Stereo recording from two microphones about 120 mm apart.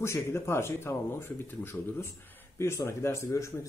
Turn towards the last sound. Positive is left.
turn(degrees=25)  # may be behind; listen again after turning